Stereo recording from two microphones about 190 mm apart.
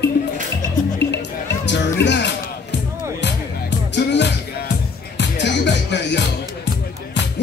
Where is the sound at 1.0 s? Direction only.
65° left (ahead or behind).